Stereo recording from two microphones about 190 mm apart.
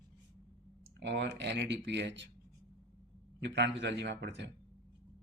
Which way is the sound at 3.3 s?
65° right (ahead or behind).